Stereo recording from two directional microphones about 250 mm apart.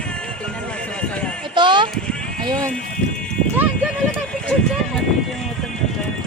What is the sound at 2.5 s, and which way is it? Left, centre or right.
Speech, centre.